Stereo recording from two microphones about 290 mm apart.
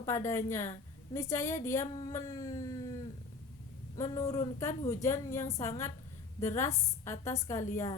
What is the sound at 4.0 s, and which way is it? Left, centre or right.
A woman's voice, centre.